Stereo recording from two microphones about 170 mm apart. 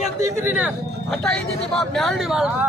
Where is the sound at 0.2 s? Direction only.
15° right (ahead or behind).